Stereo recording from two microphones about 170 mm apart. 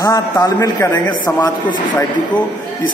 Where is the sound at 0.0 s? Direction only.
20° left (ahead or behind).